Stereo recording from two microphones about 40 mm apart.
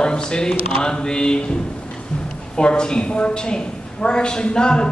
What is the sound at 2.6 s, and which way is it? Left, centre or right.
A woman's voice, left.